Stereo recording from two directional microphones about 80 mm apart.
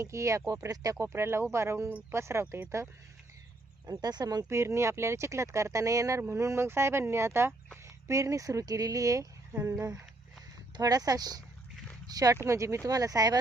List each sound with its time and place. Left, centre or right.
0.0 s speech: right
1.0 s speech: right
1.9 s speech: right
2.1 s speech: right
3.8 s speech: right
4.4 s speech: right
12.1 s speech: right